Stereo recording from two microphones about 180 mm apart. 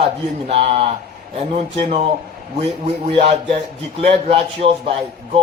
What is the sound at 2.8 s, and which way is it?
A man's voice, 30° right (ahead or behind).